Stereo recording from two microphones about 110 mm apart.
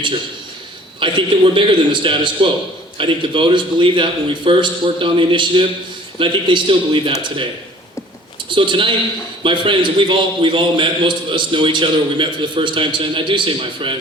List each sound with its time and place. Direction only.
0.9 s a man's voice: 50° right (ahead or behind)
8.4 s a man's voice: 50° right (ahead or behind)